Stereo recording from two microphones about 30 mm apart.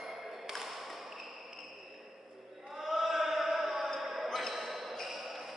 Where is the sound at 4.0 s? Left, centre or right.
Centre.